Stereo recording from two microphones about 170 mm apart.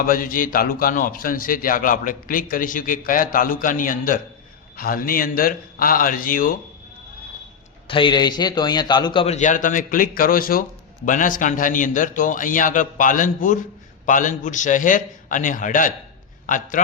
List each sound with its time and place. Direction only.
0.0 s a man's voice: 55° left (ahead or behind)
7.9 s a man's voice: 30° left (ahead or behind)
9.2 s speech: 45° left (ahead or behind)